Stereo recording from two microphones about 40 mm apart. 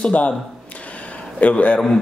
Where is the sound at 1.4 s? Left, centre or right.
Left.